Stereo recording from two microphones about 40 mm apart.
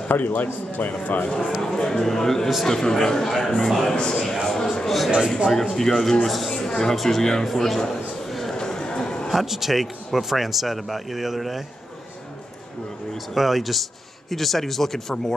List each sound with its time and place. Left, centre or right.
0.1 s a man's voice: left
1.6 s speech: centre
3.9 s a man's voice: left
4.2 s speech: centre
6.5 s music: centre
7.0 s speech: centre
8.3 s a sound: centre
8.5 s a sound: centre
9.3 s speech: centre
13.3 s speech: centre